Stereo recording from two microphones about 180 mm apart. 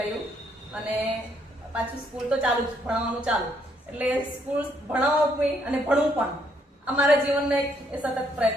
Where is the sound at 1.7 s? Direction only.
5° right (ahead or behind).